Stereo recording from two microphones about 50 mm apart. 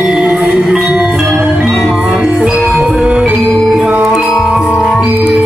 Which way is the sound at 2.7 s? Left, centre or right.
Centre.